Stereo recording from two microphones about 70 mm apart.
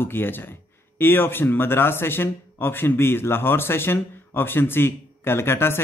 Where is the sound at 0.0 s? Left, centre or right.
Left.